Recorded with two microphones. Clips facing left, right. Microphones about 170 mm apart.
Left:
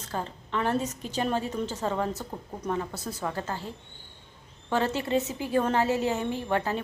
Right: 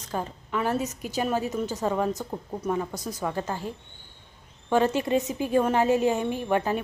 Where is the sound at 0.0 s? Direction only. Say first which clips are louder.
Right 2 dB; 15° right (ahead or behind).